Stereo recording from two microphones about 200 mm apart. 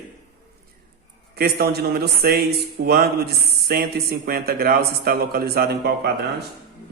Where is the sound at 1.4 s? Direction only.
50° right (ahead or behind).